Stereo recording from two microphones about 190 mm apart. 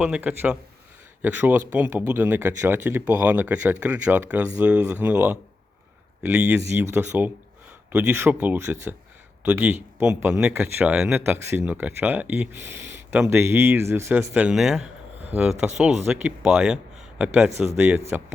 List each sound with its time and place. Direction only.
0.0 s a man's voice: 5° right (ahead or behind)